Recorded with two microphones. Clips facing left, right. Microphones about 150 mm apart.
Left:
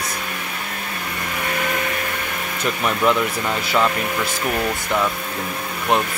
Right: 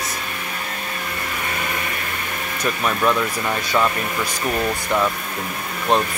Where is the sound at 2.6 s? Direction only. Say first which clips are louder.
Left 1 dB; 20° left (ahead or behind).